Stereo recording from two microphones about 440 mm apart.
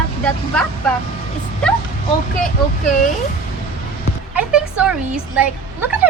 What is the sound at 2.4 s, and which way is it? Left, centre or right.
Speech, centre.